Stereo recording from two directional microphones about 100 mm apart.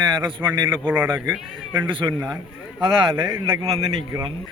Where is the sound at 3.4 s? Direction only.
60° right (ahead or behind).